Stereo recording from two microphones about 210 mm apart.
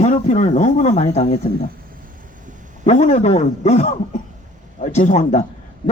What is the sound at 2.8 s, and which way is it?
Speech, 35° left (ahead or behind).